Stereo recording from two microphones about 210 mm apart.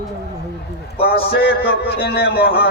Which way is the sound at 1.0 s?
50° left (ahead or behind).